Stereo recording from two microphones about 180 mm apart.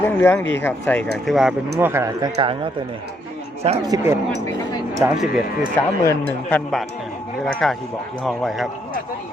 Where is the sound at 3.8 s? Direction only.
20° right (ahead or behind).